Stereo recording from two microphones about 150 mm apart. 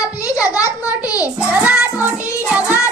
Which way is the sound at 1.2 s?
10° right (ahead or behind).